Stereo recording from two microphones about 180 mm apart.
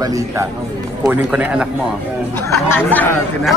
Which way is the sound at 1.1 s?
10° right (ahead or behind).